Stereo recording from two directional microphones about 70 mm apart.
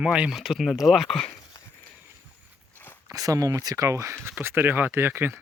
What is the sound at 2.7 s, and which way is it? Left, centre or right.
Walk, left.